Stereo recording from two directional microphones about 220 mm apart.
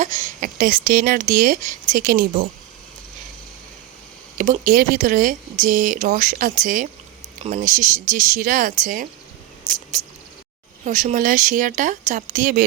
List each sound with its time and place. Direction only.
0.0 s speech: 35° right (ahead or behind)
4.4 s speech: 35° right (ahead or behind)
10.8 s speech: 35° right (ahead or behind)